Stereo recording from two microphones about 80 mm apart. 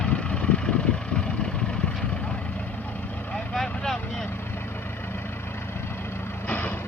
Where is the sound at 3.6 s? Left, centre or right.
Centre.